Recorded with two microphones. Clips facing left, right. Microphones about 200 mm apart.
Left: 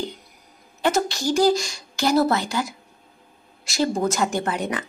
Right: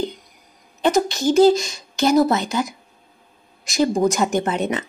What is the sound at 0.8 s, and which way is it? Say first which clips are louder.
A woman's voice: right 4 dB; 20° right (ahead or behind).